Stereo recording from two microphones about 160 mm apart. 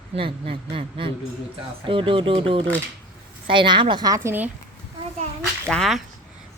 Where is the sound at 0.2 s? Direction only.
35° right (ahead or behind); by 4.4 s 15° right (ahead or behind).